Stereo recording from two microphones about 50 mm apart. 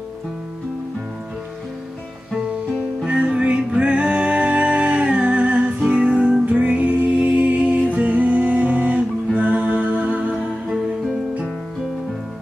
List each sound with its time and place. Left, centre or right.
3.1 s music: right
10.3 s music: centre